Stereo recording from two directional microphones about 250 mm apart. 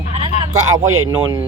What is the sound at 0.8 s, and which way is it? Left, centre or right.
Speech, right.